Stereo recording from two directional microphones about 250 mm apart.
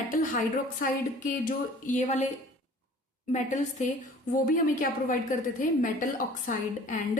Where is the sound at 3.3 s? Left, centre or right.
Left.